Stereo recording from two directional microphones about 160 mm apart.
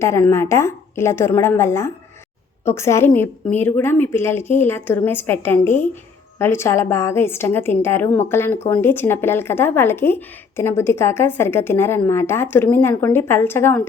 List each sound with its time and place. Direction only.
0.0 s a woman's voice: 15° left (ahead or behind)